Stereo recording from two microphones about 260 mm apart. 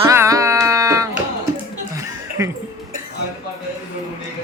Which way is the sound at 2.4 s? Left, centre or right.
Centre.